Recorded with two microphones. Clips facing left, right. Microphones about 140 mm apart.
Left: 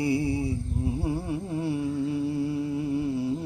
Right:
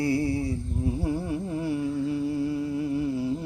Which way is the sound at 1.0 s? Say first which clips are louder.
Right 1 dB; 25° left (ahead or behind).